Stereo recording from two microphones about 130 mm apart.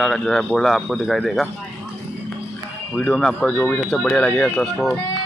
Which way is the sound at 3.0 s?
5° left (ahead or behind).